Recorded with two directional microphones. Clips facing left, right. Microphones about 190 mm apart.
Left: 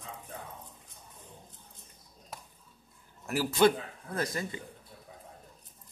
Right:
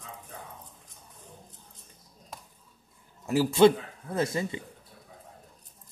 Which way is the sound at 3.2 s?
25° right (ahead or behind).